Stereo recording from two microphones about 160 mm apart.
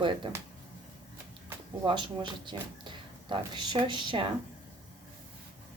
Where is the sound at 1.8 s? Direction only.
30° right (ahead or behind).